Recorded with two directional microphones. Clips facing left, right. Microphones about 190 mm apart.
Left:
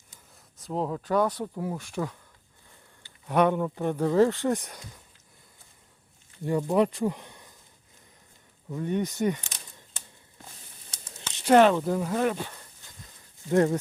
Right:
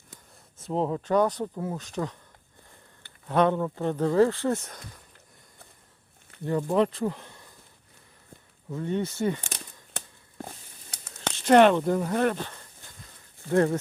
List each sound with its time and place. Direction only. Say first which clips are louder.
0.7 s speech: right 2 dB; centre (ahead or behind)
1.2 s speech: right 2 dB; 20° right (ahead or behind)
1.5 s speech: even; 10° left (ahead or behind)
3.2 s speech: even; 15° left (ahead or behind)
6.4 s speech: even; 10° left (ahead or behind)
8.7 s speech: even; 15° left (ahead or behind)
9.4 s a sound: right 6 dB; 55° right (ahead or behind)
11.0 s a sound: right 10 dB; 65° right (ahead or behind)
11.3 s speech: right 1 dB; 5° left (ahead or behind)